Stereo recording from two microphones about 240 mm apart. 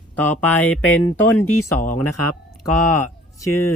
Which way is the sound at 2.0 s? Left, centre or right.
Left.